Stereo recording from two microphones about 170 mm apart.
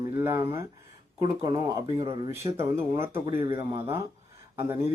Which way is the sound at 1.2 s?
30° right (ahead or behind).